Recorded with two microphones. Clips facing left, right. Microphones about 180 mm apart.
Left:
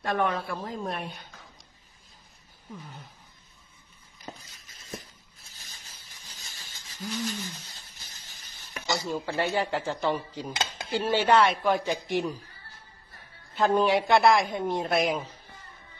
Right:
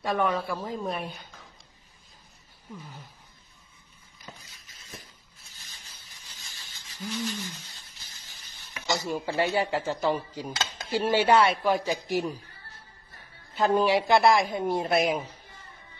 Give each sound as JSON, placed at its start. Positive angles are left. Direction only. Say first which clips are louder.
{"t": 0.0, "sound": "speech", "louder": "right 1 dB", "side_deg": 0}
{"t": 4.5, "sound": "a sound", "louder": "left 6 dB", "side_deg": 45}
{"t": 9.0, "sound": "speech", "louder": "right 2 dB", "side_deg": -15}
{"t": 13.6, "sound": "speech", "louder": "even", "side_deg": 0}